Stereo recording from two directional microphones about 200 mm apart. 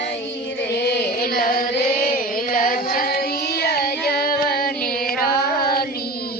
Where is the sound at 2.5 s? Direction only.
45° left (ahead or behind).